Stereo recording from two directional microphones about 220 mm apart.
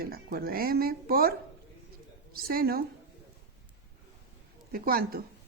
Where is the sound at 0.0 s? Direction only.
45° right (ahead or behind).